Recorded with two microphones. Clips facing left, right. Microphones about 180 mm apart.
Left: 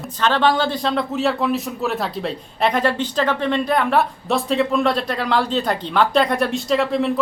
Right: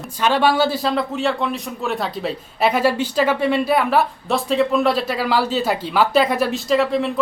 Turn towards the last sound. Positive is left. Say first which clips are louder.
# right 1 dB
turn(degrees=0)  # may be behind; listen again after turning